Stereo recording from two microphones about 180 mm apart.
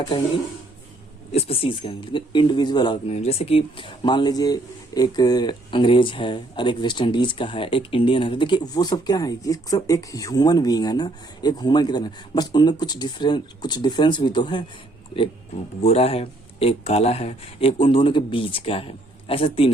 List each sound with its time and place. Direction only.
1.3 s speech: 35° left (ahead or behind)
15.8 s speech: 35° left (ahead or behind)